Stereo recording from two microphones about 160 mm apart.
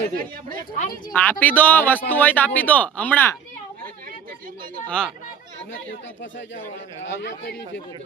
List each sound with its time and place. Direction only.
0.1 s speech: 65° right (ahead or behind)
1.1 s speech: 10° left (ahead or behind)
4.9 s speech: 5° left (ahead or behind)
7.2 s a man's voice: 90° left